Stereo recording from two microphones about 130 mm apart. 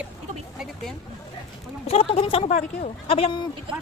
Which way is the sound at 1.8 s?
50° left (ahead or behind).